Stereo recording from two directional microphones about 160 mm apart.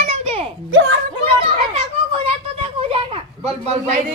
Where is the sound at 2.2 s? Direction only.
35° right (ahead or behind).